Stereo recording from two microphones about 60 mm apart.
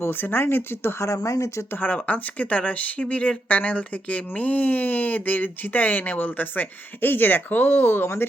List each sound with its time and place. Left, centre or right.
0.0 s speech: left
1.0 s speech: left
1.7 s speech: left
7.9 s speech: left